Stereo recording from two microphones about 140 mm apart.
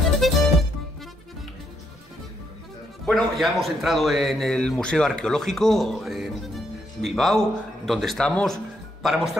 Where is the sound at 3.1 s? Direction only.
Centre (ahead or behind).